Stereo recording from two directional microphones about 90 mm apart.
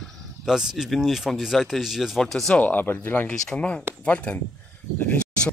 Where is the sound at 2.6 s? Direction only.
20° left (ahead or behind).